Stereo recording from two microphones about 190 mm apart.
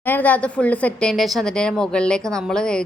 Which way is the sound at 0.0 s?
10° left (ahead or behind).